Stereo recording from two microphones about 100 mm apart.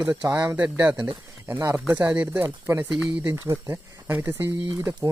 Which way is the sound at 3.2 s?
25° right (ahead or behind).